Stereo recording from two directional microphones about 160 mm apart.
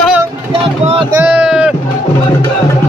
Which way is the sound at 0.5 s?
35° right (ahead or behind).